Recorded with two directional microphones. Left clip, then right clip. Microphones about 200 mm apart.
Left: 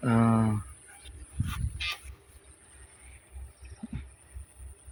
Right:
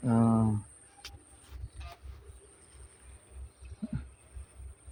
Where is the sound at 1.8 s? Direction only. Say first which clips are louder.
Left 17 dB; 40° right (ahead or behind).